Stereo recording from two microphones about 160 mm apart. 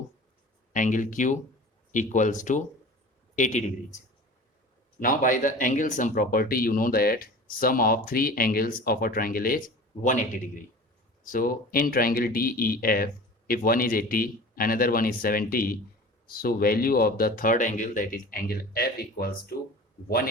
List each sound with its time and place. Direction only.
0.7 s a man's voice: 55° left (ahead or behind)
4.9 s speech: 60° left (ahead or behind)